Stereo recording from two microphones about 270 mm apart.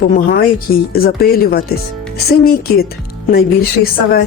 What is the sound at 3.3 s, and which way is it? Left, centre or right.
Speech, left.